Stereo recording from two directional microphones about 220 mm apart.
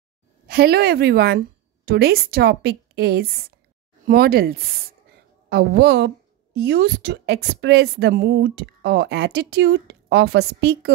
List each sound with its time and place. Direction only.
0.5 s a woman's voice: 45° right (ahead or behind)